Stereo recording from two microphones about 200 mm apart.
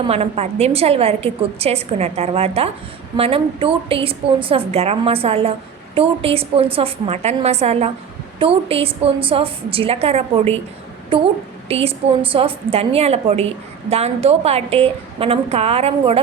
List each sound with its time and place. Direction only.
0.0 s a woman's voice: 30° right (ahead or behind)